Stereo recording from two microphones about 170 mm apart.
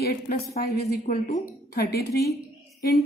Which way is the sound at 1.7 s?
70° left (ahead or behind).